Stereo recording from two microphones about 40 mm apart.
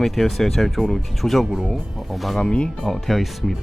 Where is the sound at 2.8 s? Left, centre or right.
Centre.